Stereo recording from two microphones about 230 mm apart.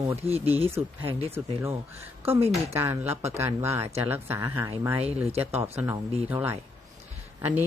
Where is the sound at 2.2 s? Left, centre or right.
Right.